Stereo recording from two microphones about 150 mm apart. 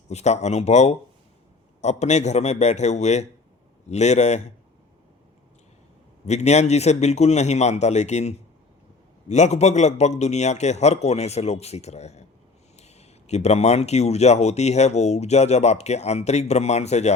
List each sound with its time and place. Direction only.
0.1 s speech: 50° left (ahead or behind)
6.2 s speech: 50° left (ahead or behind)